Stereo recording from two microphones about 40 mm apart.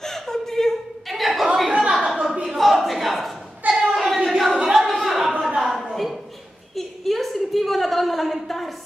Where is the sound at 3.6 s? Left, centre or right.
Right.